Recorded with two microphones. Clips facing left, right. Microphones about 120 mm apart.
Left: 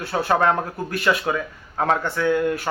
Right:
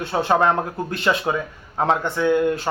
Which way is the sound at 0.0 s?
20° right (ahead or behind).